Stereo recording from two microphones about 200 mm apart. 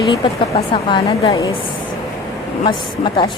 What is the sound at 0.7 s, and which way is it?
Speech, 25° left (ahead or behind).